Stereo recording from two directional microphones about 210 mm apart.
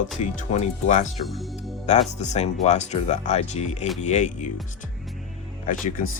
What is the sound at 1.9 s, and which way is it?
Speech, 35° left (ahead or behind).